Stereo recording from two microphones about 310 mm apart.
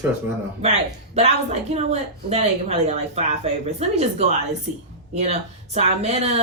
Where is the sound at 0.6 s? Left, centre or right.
Centre.